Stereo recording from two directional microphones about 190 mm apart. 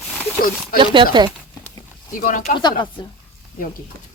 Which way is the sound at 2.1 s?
45° left (ahead or behind).